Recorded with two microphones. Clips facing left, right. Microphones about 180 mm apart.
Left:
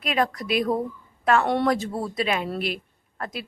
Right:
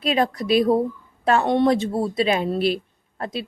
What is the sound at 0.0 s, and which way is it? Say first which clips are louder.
A woman's voice: right 4 dB; 30° right (ahead or behind).